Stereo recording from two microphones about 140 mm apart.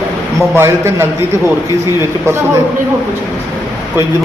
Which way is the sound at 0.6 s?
20° right (ahead or behind).